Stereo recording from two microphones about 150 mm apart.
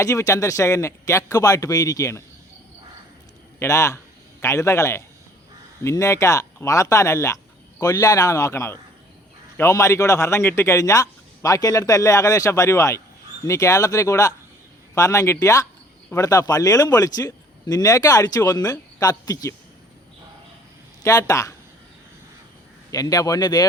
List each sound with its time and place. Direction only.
0.0 s a man's voice: 20° left (ahead or behind)
3.6 s a man's voice: 20° left (ahead or behind)
21.0 s a man's voice: 20° left (ahead or behind)
22.9 s a man's voice: 25° left (ahead or behind)